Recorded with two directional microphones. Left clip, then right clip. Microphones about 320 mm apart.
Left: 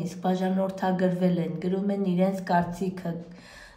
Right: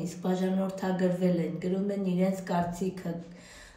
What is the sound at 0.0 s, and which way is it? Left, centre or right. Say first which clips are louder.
Speech: left 3 dB; left.